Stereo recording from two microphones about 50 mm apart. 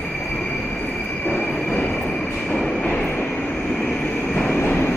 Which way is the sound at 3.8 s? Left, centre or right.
Left.